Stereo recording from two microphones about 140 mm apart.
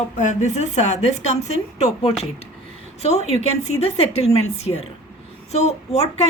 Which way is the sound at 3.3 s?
50° left (ahead or behind).